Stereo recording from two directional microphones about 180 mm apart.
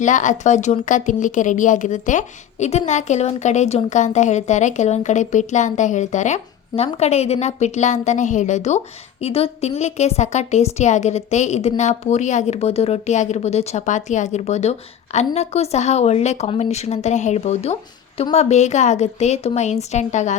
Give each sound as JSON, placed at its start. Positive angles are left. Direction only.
{"t": 0.0, "sound": "a woman's voice", "side_deg": 45}